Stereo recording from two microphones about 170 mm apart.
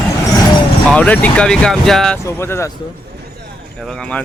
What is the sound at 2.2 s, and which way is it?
Speech, 15° left (ahead or behind).